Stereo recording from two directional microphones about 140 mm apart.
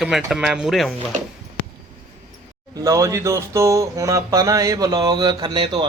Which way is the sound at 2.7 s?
25° right (ahead or behind).